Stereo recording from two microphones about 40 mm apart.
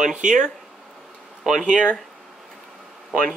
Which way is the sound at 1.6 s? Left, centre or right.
Right.